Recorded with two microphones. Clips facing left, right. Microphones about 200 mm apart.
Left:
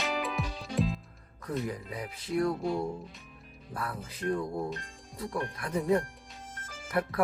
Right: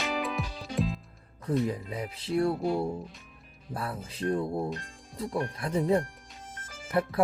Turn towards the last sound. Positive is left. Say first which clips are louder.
# right 3 dB
turn(degrees=-25)  # may be behind; listen again after turning